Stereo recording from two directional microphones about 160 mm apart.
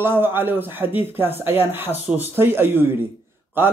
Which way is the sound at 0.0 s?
15° right (ahead or behind).